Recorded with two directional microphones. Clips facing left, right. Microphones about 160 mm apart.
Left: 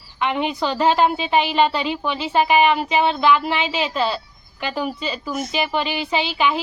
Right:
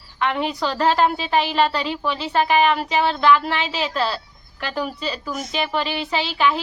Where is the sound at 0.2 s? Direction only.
Centre (ahead or behind).